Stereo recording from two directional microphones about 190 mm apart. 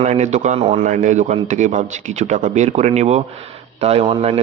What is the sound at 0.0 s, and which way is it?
A man's voice, 35° right (ahead or behind).